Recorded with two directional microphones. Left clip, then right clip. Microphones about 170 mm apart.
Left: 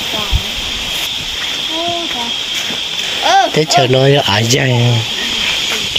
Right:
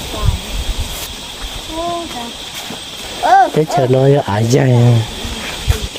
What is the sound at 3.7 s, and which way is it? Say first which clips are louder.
Speech: left 2 dB; 15° right (ahead or behind).